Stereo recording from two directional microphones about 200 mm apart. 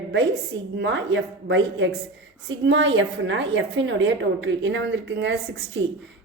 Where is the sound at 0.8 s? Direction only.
60° right (ahead or behind).